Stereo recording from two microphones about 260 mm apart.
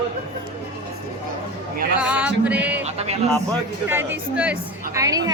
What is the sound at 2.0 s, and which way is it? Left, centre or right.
Music, centre.